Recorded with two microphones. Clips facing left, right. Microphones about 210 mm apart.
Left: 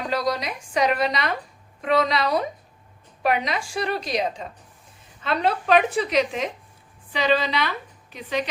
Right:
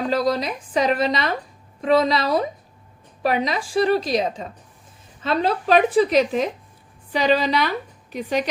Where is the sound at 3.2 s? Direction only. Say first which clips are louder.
Right 2 dB; 35° right (ahead or behind).